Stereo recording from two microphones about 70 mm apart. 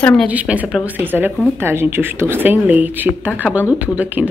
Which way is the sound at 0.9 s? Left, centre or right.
Right.